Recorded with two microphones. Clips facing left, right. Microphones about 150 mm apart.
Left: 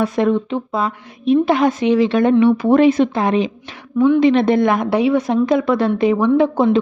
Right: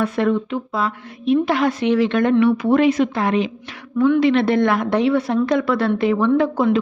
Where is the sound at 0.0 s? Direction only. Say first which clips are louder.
Left 2 dB; 15° left (ahead or behind).